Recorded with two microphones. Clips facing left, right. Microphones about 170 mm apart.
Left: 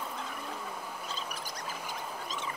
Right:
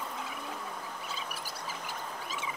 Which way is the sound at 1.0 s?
5° right (ahead or behind).